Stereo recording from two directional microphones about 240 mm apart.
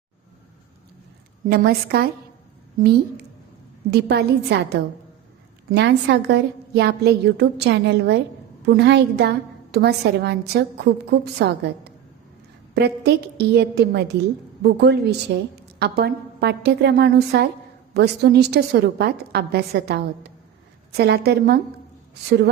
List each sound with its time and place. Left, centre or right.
1.5 s a woman's voice: right